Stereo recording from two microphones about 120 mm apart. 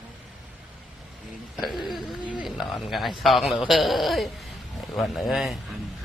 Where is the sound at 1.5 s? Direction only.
Centre (ahead or behind).